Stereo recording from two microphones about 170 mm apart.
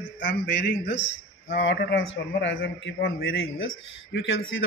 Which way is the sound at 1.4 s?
90° left.